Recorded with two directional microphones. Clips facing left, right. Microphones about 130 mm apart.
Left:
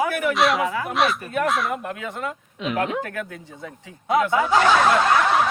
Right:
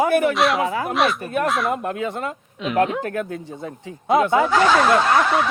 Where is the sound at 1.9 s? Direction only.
30° right (ahead or behind).